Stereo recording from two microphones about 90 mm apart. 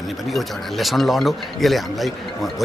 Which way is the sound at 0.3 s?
Centre (ahead or behind).